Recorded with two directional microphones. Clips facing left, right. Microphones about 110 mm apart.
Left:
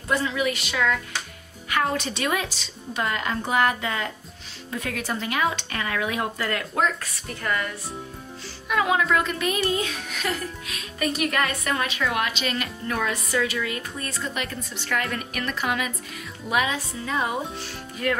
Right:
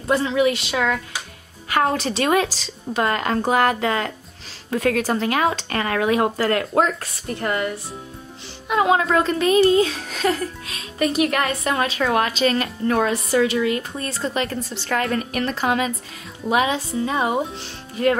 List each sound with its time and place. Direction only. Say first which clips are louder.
0.0 s a child's voice: right 6 dB; 30° right (ahead or behind)
3.0 s speech: right 6 dB; 55° right (ahead or behind)
5.0 s a child's voice: right 5 dB; 40° right (ahead or behind)
7.0 s speech: right 7 dB; 30° right (ahead or behind)
8.6 s a child's voice: right 4 dB; 30° right (ahead or behind)